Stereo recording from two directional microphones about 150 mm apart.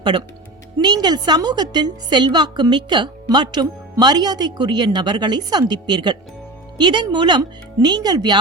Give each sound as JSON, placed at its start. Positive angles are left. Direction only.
{"t": 0.0, "sound": "a woman's voice", "side_deg": -30}